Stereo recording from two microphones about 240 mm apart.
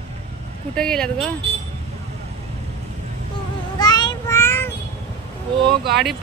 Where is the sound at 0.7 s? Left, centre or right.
Centre.